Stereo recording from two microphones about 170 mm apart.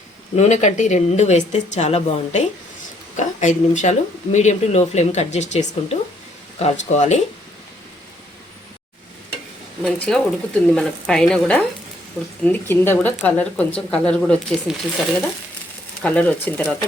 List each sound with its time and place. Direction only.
0.3 s speech: 45° left (ahead or behind)
9.8 s speech: 5° left (ahead or behind)
16.0 s speech: 10° left (ahead or behind)